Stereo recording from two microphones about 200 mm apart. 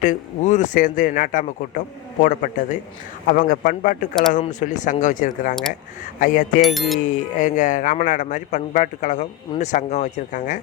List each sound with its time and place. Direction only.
0.0 s a man's voice: 40° left (ahead or behind)
6.6 s music: centre (ahead or behind)
7.0 s a man's voice: 40° left (ahead or behind)